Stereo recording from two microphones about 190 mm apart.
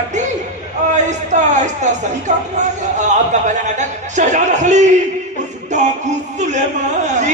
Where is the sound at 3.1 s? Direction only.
40° right (ahead or behind).